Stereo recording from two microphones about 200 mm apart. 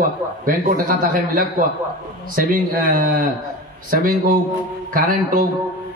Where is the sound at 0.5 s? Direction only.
45° right (ahead or behind).